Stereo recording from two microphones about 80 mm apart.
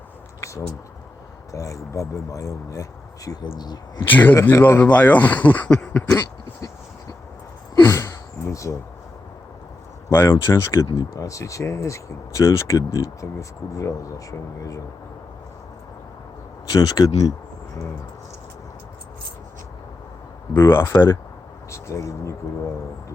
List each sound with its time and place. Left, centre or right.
0.4 s a sound: left
1.5 s speech: left
3.4 s speech: left
4.1 s speech: left
7.9 s a sound: left
8.5 s speech: left
10.1 s speech: left
16.6 s speech: left
20.5 s speech: left
20.9 s speech: left
21.7 s speech: left